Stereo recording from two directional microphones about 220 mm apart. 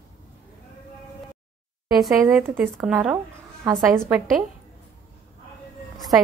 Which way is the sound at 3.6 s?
15° right (ahead or behind).